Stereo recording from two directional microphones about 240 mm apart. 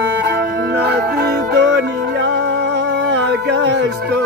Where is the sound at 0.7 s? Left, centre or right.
Right.